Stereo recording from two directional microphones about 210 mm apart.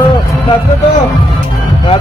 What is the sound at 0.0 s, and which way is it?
Music, 20° left (ahead or behind).